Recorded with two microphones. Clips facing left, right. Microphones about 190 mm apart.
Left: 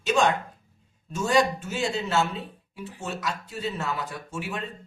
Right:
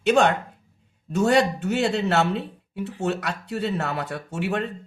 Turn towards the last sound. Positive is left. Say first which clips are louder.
# right 7 dB
turn(degrees=-65)  # may be behind; listen again after turning